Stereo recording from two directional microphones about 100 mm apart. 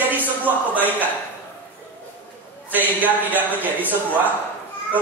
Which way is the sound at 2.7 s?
15° right (ahead or behind).